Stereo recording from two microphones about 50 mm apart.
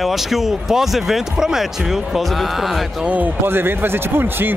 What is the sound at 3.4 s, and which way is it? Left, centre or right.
Speech, right.